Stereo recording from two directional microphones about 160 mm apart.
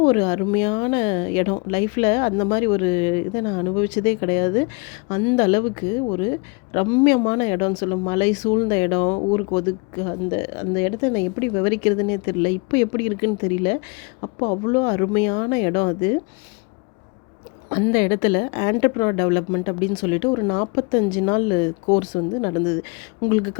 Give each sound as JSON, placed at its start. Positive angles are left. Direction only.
{"t": 0.0, "sound": "a woman's voice", "side_deg": 30}
{"t": 17.7, "sound": "a woman's voice", "side_deg": 35}